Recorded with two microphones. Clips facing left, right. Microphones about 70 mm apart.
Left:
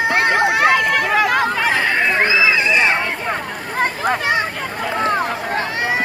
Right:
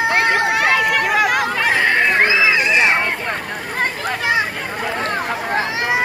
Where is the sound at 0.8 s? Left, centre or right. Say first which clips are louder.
Even; centre.